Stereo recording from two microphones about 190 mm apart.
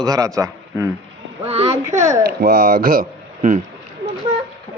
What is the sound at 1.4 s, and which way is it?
Speech, 30° right (ahead or behind).